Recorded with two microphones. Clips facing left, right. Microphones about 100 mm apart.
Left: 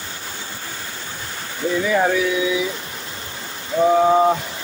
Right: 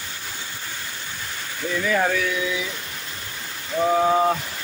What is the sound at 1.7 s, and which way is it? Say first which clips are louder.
Speech: left 3 dB; 15° left (ahead or behind).